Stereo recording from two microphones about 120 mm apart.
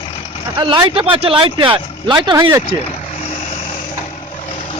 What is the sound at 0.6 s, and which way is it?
Speech, 40° right (ahead or behind).